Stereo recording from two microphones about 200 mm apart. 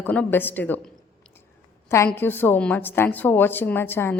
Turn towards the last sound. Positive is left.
turn(degrees=10)  # may be behind; listen again after turning